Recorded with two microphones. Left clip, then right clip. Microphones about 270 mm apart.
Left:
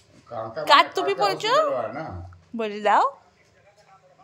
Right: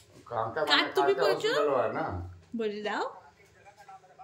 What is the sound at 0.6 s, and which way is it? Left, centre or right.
Speech, centre.